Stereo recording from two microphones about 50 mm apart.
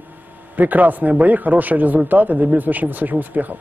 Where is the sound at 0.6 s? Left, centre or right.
Right.